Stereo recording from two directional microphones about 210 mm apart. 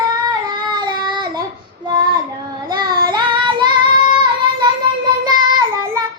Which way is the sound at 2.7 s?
20° right (ahead or behind).